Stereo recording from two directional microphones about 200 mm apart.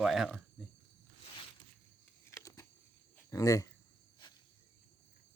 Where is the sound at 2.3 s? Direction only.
15° left (ahead or behind).